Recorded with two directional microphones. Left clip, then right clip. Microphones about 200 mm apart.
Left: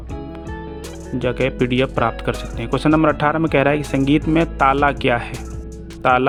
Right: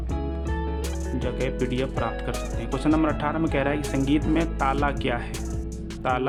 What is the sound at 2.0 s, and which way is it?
Speech, 40° left (ahead or behind).